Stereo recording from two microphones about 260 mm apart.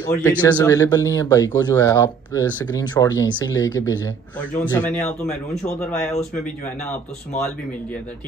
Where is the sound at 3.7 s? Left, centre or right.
Left.